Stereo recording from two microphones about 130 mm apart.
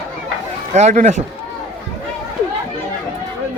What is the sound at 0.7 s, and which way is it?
Speech, 65° right (ahead or behind).